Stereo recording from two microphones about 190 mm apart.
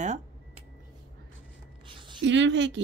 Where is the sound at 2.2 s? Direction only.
70° right (ahead or behind).